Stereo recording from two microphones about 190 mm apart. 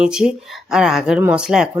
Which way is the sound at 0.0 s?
5° right (ahead or behind).